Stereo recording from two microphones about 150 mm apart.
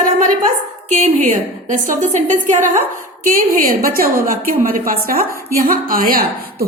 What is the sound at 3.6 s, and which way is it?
A woman's voice, 75° right (ahead or behind).